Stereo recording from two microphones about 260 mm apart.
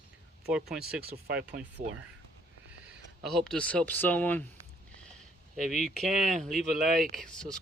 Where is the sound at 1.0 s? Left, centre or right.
Right.